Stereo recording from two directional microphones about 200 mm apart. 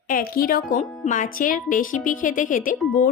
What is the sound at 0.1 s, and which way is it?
Speech, 45° left (ahead or behind).